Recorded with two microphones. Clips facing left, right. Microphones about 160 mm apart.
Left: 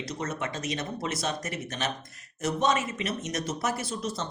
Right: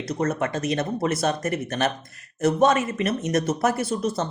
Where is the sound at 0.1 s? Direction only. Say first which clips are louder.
Right 11 dB; 55° right (ahead or behind).